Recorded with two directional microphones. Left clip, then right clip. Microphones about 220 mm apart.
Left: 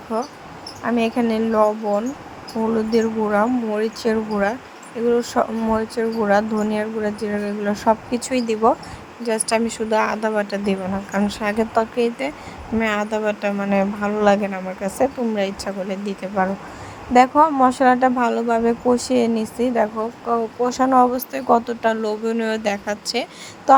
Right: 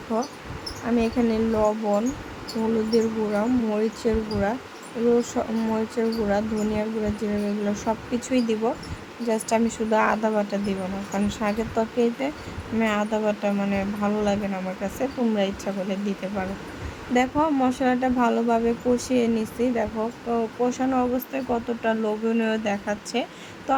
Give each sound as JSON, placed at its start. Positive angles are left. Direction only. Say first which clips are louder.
{"t": 0.1, "sound": "speech", "louder": "left 3 dB", "side_deg": 20}